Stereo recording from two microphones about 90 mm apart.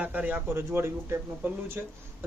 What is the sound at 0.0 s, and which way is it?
A man's voice, 15° right (ahead or behind).